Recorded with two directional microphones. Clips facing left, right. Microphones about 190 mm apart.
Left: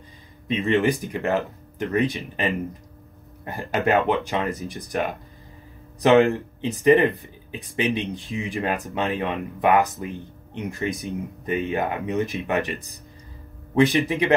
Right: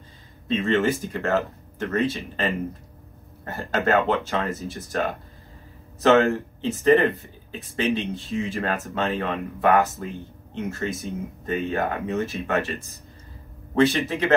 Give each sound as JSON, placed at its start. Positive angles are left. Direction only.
{"t": 0.5, "sound": "speech", "side_deg": 15}